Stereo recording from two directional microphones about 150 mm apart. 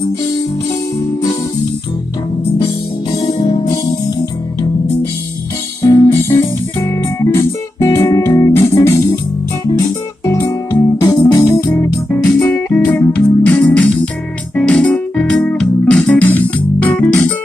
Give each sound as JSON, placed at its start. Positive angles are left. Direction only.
{"t": 2.6, "sound": "music", "side_deg": 40}
{"t": 5.9, "sound": "music", "side_deg": 20}